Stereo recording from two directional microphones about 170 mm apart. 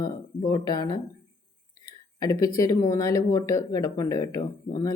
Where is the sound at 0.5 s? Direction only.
25° left (ahead or behind).